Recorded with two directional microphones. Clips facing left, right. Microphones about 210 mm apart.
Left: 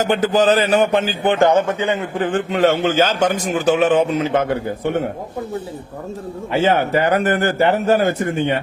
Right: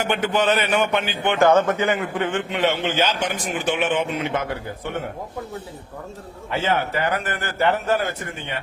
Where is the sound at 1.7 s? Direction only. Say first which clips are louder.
Left 2 dB; 30° left (ahead or behind).